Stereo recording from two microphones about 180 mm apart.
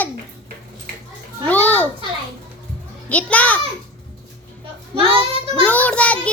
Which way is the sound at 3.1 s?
10° left (ahead or behind).